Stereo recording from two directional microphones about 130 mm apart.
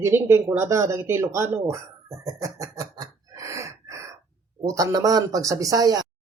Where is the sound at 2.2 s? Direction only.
25° right (ahead or behind).